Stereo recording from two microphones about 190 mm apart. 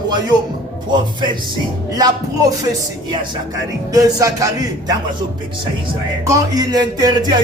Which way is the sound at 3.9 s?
20° right (ahead or behind).